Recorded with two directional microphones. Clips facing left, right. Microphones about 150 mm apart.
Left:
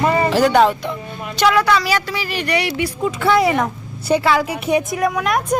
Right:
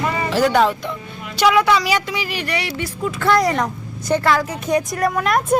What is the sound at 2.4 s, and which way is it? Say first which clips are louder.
A woman's voice: left 4 dB; centre (ahead or behind).